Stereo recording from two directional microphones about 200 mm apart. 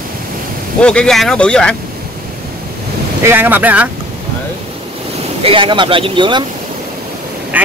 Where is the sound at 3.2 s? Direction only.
10° right (ahead or behind).